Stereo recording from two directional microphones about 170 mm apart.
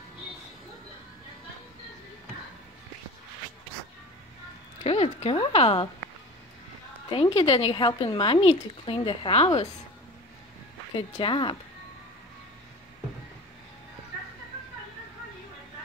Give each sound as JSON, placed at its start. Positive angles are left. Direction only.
{"t": 4.8, "sound": "a sound", "side_deg": 35}
{"t": 7.1, "sound": "speech", "side_deg": 35}
{"t": 11.0, "sound": "speech", "side_deg": 30}